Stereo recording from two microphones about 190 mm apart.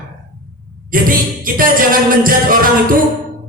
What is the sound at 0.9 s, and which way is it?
Music, 50° right (ahead or behind).